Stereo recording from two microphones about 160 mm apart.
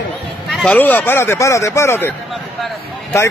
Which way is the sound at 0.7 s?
10° left (ahead or behind).